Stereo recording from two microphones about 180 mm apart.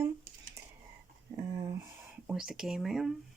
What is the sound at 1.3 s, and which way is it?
Speech, 15° right (ahead or behind).